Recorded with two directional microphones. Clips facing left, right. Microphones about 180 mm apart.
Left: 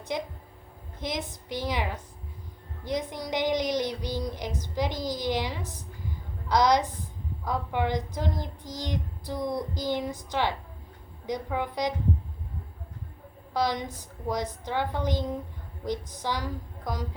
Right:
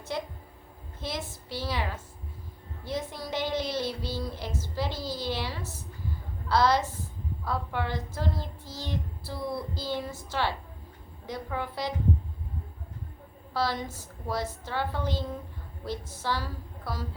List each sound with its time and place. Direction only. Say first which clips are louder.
0.1 s speech: left 2 dB; 15° left (ahead or behind)
13.5 s speech: left 2 dB; 15° left (ahead or behind)